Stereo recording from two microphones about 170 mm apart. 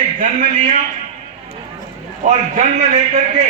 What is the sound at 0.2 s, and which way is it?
Speech, 50° right (ahead or behind).